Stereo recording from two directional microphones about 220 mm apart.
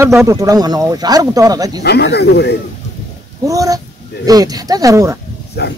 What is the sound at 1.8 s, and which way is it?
Speech, 50° left (ahead or behind).